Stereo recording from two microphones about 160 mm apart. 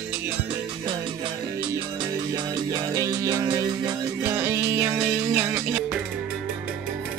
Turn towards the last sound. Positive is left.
turn(degrees=-10)  # may be behind; listen again after turning